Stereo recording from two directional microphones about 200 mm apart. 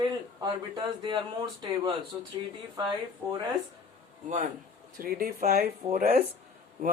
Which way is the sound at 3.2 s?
20° right (ahead or behind).